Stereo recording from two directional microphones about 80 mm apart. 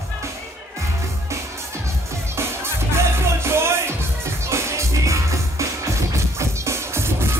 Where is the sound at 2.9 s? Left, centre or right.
Right.